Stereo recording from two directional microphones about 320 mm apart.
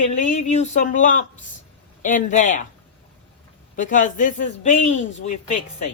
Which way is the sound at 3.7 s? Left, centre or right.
Left.